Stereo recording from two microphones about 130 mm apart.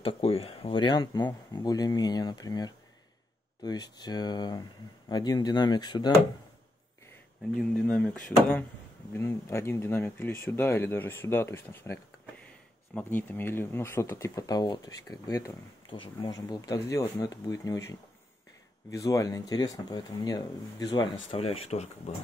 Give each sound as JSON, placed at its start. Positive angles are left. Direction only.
{"t": 0.0, "sound": "speech", "side_deg": 50}
{"t": 7.8, "sound": "speech", "side_deg": 10}
{"t": 9.1, "sound": "speech", "side_deg": 20}